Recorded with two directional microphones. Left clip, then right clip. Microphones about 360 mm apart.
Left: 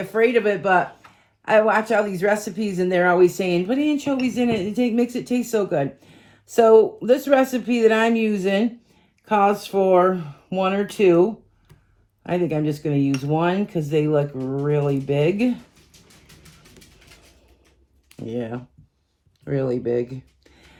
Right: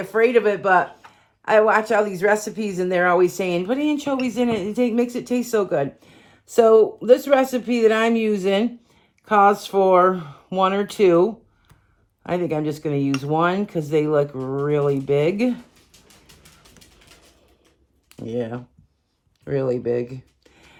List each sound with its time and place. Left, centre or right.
0.1 s speech: right
18.3 s speech: right